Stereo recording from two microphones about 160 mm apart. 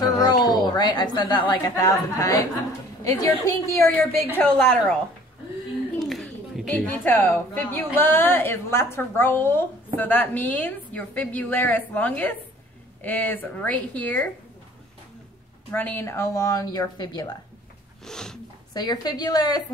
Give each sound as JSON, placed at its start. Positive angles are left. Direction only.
{"t": 0.0, "sound": "a sound", "side_deg": 25}
{"t": 0.7, "sound": "a woman's voice", "side_deg": 25}
{"t": 4.4, "sound": "a woman's voice", "side_deg": 5}
{"t": 5.9, "sound": "a sound", "side_deg": 0}
{"t": 6.7, "sound": "a woman's voice", "side_deg": 10}
{"t": 15.7, "sound": "a woman's voice", "side_deg": 10}
{"t": 18.0, "sound": "a woman's voice", "side_deg": 5}
{"t": 18.7, "sound": "a woman's voice", "side_deg": 25}